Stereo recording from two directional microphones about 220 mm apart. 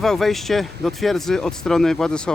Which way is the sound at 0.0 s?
Centre (ahead or behind).